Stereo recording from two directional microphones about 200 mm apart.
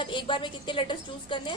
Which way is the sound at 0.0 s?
25° left (ahead or behind).